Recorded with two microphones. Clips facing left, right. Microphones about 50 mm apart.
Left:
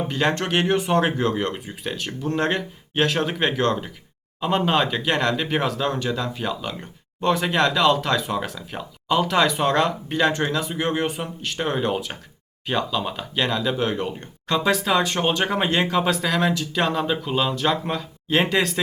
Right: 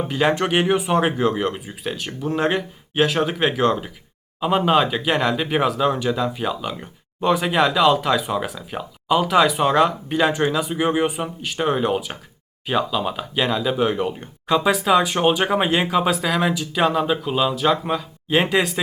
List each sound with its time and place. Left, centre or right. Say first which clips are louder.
0.1 s speech: right 4 dB; centre